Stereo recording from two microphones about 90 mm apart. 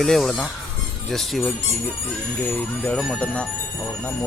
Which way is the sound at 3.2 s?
15° left (ahead or behind).